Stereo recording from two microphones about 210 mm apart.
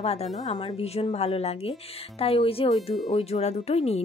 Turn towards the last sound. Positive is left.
turn(degrees=30)  # may be behind; listen again after turning